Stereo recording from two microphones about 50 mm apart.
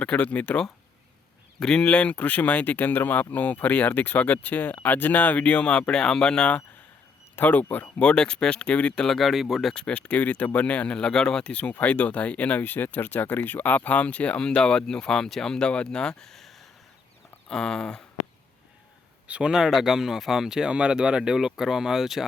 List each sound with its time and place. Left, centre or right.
0.2 s speech: left
1.5 s speech: centre
7.3 s speech: left
8.0 s speech: centre
9.0 s speech: centre
9.7 s speech: left
11.4 s speech: left
16.3 s a sound: centre
17.5 s speech: centre
19.5 s speech: centre